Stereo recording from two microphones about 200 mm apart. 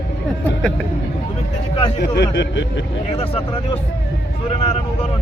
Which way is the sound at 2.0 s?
60° left (ahead or behind).